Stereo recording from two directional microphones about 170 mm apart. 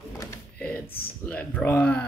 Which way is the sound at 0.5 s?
10° left (ahead or behind).